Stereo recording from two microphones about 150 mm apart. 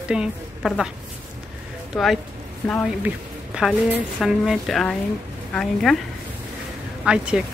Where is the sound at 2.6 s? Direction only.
10° left (ahead or behind).